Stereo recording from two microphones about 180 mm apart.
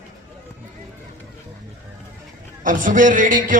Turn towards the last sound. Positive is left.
turn(degrees=-45)  # may be behind; listen again after turning